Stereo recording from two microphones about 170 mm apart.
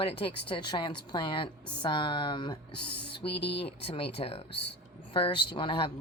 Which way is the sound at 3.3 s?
85° left.